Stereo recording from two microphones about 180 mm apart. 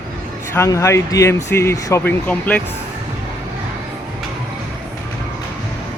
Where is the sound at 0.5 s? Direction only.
15° left (ahead or behind).